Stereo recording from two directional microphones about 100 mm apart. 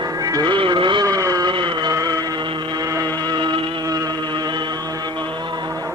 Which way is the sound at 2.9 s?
50° right (ahead or behind).